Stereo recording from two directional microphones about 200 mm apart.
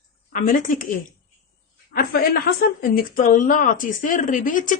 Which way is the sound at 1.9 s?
45° left (ahead or behind).